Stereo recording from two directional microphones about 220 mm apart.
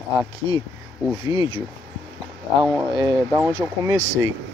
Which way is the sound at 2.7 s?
20° right (ahead or behind).